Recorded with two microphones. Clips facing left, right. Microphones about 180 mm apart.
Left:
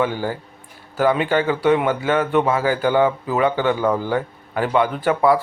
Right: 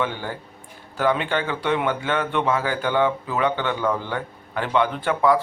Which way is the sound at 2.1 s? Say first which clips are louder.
Left 6 dB; 45° left (ahead or behind).